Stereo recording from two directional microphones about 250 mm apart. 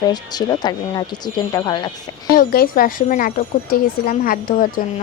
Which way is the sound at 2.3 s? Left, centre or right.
Left.